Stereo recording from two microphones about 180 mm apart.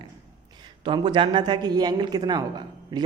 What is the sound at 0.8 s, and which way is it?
A man's voice, 25° right (ahead or behind).